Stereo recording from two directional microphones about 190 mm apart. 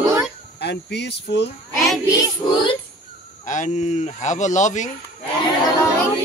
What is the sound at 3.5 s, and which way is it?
Speech, 40° left (ahead or behind).